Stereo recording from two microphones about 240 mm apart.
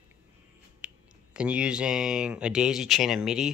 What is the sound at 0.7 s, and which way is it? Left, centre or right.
Speech, centre.